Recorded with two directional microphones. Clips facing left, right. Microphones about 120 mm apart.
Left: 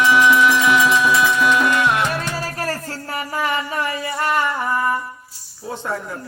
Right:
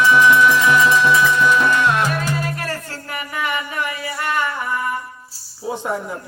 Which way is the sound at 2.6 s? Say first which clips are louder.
Left 2 dB; 35° left (ahead or behind).